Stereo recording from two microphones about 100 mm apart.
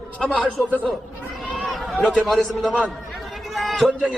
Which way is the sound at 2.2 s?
Centre (ahead or behind).